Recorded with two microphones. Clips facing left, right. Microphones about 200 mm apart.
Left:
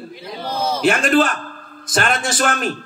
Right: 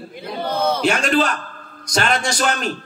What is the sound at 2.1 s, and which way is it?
Speech, 5° left (ahead or behind).